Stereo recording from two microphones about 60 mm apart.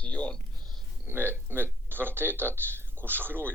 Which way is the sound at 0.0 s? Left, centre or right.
Left.